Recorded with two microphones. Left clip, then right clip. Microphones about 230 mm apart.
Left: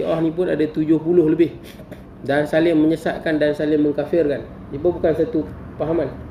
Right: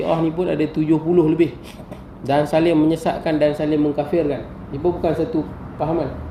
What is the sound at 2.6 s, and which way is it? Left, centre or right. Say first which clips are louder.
Speech: even; centre.